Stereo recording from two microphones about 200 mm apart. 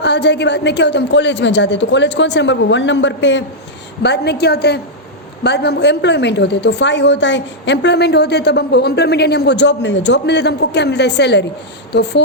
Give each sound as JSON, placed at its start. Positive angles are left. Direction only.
{"t": 0.0, "sound": "a woman's voice", "side_deg": 60}